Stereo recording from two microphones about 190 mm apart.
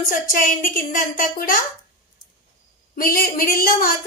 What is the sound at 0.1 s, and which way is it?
A woman's voice, 45° left (ahead or behind).